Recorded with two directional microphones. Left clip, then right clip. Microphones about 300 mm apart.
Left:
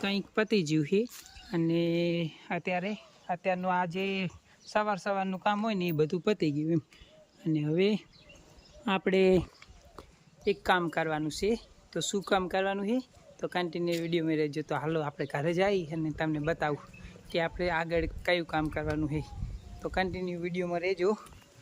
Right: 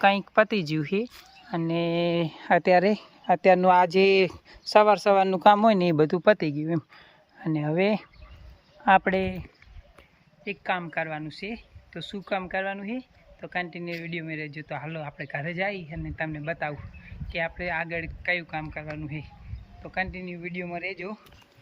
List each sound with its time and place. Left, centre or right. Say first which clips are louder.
0.0 s speech: right 11 dB; centre
3.4 s speech: right 11 dB; centre
10.4 s speech: left 2 dB; centre